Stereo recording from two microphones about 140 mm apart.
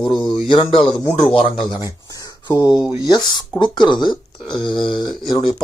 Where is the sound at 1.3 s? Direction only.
40° left (ahead or behind).